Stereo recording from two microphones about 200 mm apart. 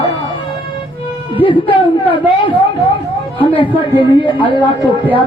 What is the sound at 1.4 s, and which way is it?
A woman's voice, 25° left (ahead or behind).